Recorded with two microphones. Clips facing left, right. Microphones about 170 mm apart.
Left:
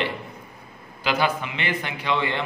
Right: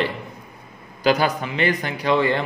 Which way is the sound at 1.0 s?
40° right (ahead or behind).